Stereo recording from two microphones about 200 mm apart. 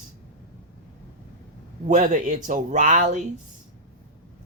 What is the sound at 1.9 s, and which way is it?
Speech, 40° right (ahead or behind).